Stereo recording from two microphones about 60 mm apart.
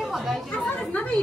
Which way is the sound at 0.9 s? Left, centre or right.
Left.